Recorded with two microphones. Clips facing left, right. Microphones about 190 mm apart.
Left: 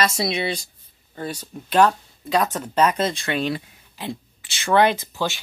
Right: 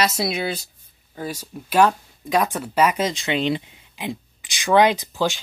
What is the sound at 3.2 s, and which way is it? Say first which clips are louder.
Speech: right 2 dB; 20° right (ahead or behind).